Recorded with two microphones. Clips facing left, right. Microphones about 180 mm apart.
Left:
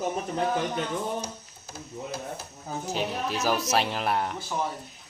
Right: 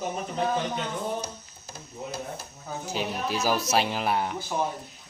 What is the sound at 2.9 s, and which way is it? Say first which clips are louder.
Speech: even; 5° right (ahead or behind).